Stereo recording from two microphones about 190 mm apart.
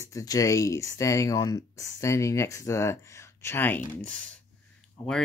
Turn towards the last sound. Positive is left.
turn(degrees=5)  # may be behind; listen again after turning